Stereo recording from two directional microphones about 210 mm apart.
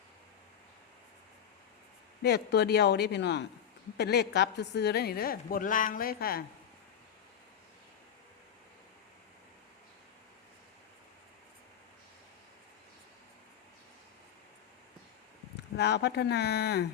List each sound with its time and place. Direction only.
2.2 s a woman's voice: 50° left (ahead or behind)
15.8 s a woman's voice: 55° left (ahead or behind)